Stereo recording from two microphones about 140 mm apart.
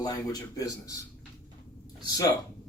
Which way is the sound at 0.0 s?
25° left (ahead or behind).